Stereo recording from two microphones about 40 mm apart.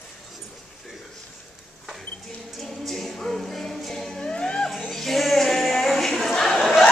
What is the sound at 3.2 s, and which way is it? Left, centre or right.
Music, centre.